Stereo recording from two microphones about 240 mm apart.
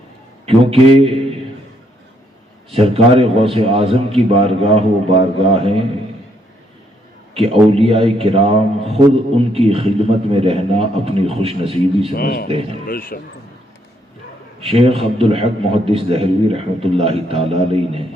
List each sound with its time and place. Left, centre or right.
0.4 s a man's voice: right
2.7 s a man's voice: right
7.3 s a man's voice: right
12.1 s a man's voice: left
14.6 s a man's voice: right